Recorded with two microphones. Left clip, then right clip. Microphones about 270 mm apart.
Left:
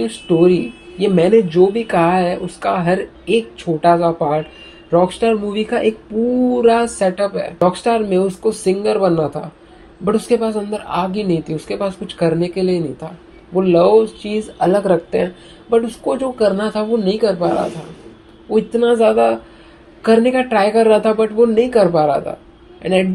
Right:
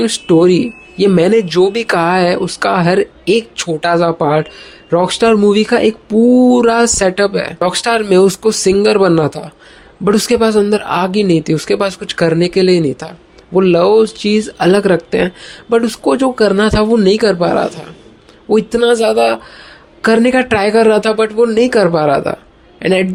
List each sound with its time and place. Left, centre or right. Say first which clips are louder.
0.0 s speech: right 4 dB; right